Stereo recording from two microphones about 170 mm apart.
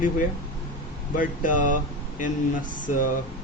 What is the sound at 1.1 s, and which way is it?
Speech, 50° left (ahead or behind).